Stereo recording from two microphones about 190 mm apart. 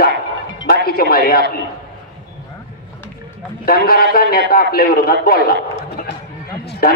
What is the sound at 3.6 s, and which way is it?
A man's voice, 50° left (ahead or behind).